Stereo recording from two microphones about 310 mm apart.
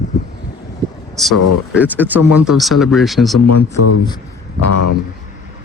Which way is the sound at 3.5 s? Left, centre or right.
Left.